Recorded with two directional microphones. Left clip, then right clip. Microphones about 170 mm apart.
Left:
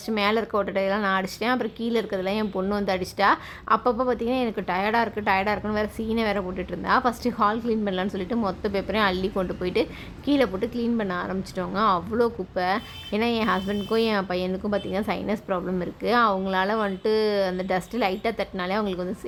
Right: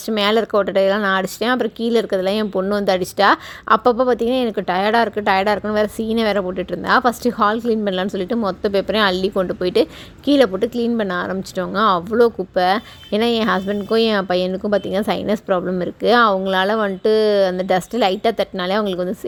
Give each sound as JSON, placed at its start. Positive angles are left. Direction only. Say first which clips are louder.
{"t": 0.1, "sound": "speech", "louder": "right 7 dB", "side_deg": -35}